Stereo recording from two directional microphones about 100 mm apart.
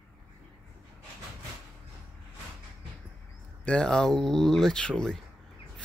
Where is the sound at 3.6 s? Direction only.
10° left (ahead or behind).